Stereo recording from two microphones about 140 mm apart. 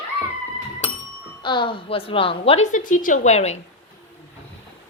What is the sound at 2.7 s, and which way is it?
Speech, 70° left (ahead or behind).